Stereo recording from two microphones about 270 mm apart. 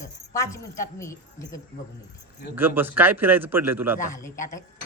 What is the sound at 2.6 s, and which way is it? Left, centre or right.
A man's voice, centre.